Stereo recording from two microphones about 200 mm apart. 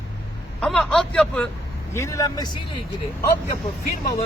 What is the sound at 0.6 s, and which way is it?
Speech, 5° left (ahead or behind).